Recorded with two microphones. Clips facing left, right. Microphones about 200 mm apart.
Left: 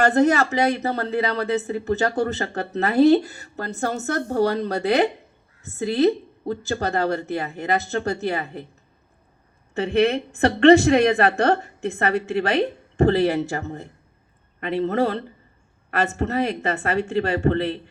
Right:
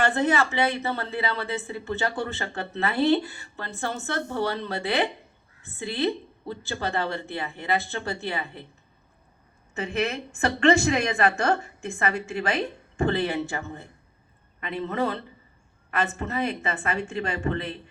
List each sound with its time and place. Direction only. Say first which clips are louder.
0.0 s speech: left 6 dB; 40° left (ahead or behind)
9.7 s speech: left 8 dB; 35° left (ahead or behind)